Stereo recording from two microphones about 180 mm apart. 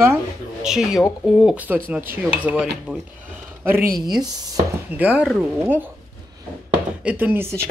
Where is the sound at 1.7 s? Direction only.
10° right (ahead or behind).